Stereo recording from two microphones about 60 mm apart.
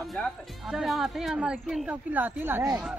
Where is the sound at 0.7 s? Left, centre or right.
Centre.